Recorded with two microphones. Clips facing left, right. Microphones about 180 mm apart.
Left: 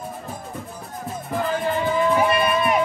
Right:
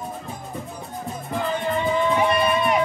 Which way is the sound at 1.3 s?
Centre (ahead or behind).